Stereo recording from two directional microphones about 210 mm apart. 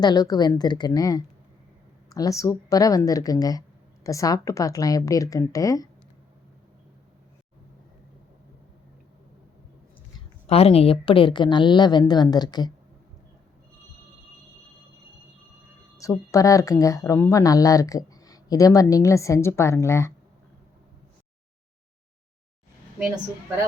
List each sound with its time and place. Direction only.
0.0 s a woman's voice: 20° left (ahead or behind)
10.4 s a woman's voice: 30° left (ahead or behind)
16.0 s speech: 15° left (ahead or behind)